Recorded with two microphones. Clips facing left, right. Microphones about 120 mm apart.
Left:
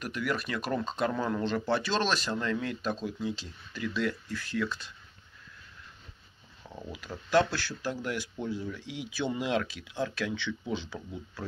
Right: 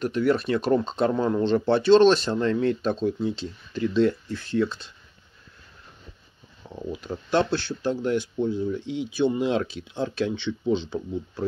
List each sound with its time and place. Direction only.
0.0 s speech: 30° right (ahead or behind)
6.9 s speech: 25° right (ahead or behind)